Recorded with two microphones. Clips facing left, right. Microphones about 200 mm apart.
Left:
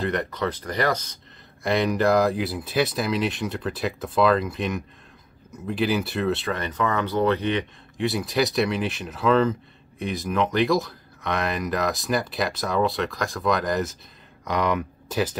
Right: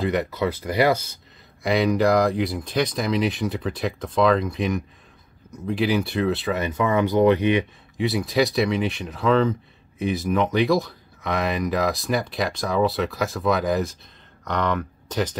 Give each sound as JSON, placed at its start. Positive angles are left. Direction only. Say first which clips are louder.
{"t": 0.0, "sound": "speech", "louder": "right 3 dB", "side_deg": -5}
{"t": 8.0, "sound": "speech", "louder": "right 2 dB", "side_deg": 0}
{"t": 14.4, "sound": "speech", "louder": "even", "side_deg": 10}